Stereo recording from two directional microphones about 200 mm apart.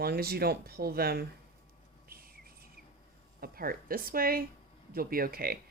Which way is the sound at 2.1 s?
50° right (ahead or behind).